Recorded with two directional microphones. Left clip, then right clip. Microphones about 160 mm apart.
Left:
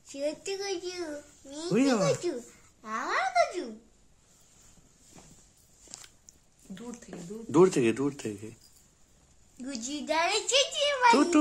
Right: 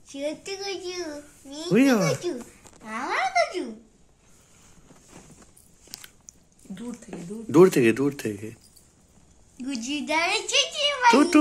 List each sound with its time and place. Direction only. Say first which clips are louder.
0.1 s a child's voice: right 2 dB; 50° left (ahead or behind)
1.7 s speech: right 6 dB; 5° right (ahead or behind)
2.8 s speech: right 3 dB; 40° left (ahead or behind)
7.5 s speech: right 6 dB; centre (ahead or behind)
9.6 s a child's voice: right 6 dB; 50° left (ahead or behind)
11.1 s speech: right 4 dB; centre (ahead or behind)